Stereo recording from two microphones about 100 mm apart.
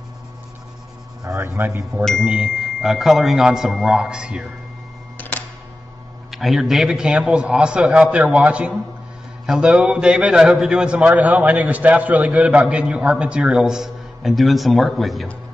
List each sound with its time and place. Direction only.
1.2 s speech: 30° right (ahead or behind)
2.2 s a man's voice: 10° right (ahead or behind)
5.1 s camera: 15° left (ahead or behind)
6.3 s a man's voice: centre (ahead or behind)